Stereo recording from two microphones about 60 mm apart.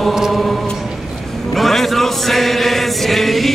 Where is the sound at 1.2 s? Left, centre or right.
Centre.